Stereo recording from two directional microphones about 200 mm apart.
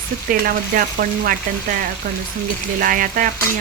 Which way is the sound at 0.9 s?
45° right (ahead or behind).